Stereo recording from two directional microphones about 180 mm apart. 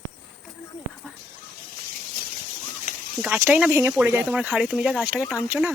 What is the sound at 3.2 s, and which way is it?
Speech, 10° right (ahead or behind).